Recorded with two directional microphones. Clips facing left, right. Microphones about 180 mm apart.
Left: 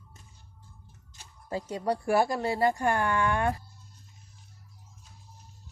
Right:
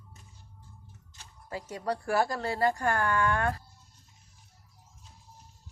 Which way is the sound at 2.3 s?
15° left (ahead or behind).